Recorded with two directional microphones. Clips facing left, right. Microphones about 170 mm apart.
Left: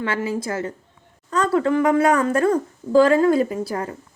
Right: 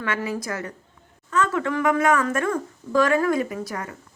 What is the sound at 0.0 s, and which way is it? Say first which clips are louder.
A woman's voice: left 3 dB; 30° left (ahead or behind).